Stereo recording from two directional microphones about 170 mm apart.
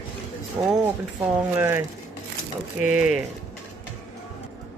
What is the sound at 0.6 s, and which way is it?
Speech, 15° right (ahead or behind).